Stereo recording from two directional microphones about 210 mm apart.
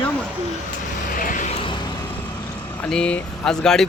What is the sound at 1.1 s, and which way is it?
Vehicle, 40° left (ahead or behind).